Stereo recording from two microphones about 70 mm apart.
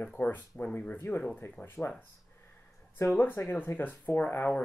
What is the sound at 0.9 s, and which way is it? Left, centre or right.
Speech, left.